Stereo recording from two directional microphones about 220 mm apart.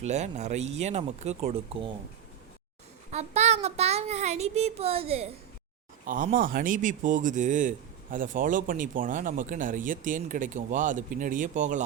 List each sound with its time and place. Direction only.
0.0 s a child's voice: 30° right (ahead or behind)
3.1 s a child's voice: 30° right (ahead or behind)
6.1 s speech: 35° right (ahead or behind)